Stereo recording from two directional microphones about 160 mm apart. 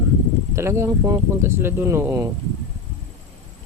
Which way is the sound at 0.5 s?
15° right (ahead or behind).